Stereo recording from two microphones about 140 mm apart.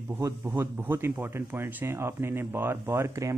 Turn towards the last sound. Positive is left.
turn(degrees=-20)  # may be behind; listen again after turning